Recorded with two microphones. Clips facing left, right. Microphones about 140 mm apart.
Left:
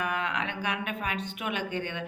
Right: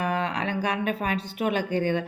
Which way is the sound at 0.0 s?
35° right (ahead or behind).